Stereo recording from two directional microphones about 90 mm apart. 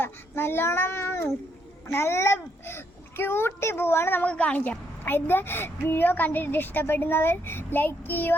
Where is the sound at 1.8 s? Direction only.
30° left (ahead or behind).